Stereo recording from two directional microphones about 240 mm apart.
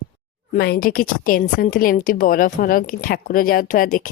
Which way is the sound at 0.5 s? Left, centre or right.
Left.